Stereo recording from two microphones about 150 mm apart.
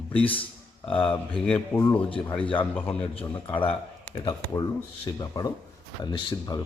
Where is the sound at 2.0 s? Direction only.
35° left (ahead or behind).